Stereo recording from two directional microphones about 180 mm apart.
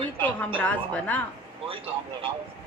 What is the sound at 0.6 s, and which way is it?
Speech, 10° left (ahead or behind).